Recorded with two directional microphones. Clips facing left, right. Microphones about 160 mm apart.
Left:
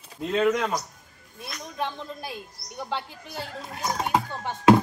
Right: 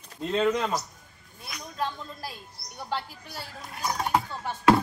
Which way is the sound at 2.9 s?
20° left (ahead or behind).